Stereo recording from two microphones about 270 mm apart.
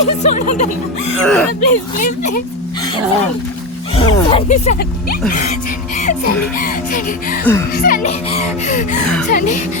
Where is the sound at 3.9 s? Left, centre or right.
Centre.